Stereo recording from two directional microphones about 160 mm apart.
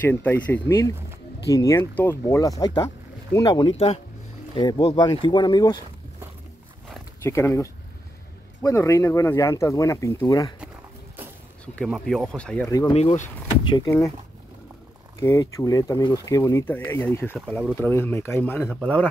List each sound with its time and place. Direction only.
0.0 s speech: 10° left (ahead or behind)
3.7 s speech: 40° left (ahead or behind)
4.6 s speech: 25° left (ahead or behind)
7.2 s speech: 15° left (ahead or behind)
11.6 s speech: 5° left (ahead or behind)
12.6 s speech: 25° left (ahead or behind)
12.9 s speech: 45° left (ahead or behind)
13.7 s speech: 25° left (ahead or behind)
15.1 s speech: 20° left (ahead or behind)